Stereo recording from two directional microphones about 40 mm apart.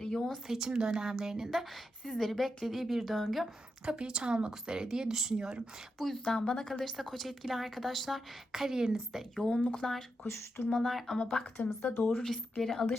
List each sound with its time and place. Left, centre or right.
0.0 s a sound: centre
0.4 s speech: centre
0.7 s speech: right
1.5 s a woman's voice: centre
3.8 s speech: right
6.0 s a woman's voice: centre
6.8 s a woman's voice: centre
8.5 s speech: centre
9.3 s speech: centre
10.3 s speech: left
10.8 s a woman's voice: centre
11.2 s a woman's voice: left
11.5 s speech: left
12.1 s speech: centre